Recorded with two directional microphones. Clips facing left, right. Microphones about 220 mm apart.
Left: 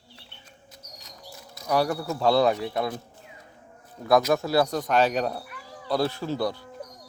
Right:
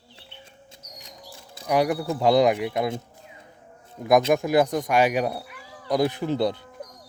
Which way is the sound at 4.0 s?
20° right (ahead or behind).